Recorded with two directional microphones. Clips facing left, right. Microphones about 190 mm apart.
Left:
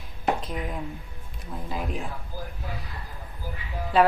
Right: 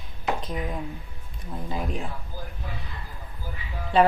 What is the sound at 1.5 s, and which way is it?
Speech, 5° left (ahead or behind).